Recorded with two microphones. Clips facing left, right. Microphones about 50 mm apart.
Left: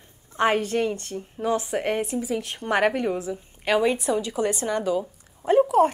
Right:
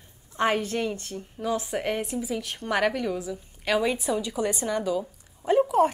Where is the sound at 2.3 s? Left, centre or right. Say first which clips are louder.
Left 3 dB; left.